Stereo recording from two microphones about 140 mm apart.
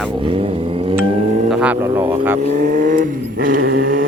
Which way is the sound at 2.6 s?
75° right (ahead or behind).